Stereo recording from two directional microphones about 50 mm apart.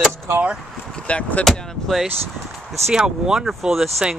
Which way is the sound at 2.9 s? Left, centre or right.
Centre.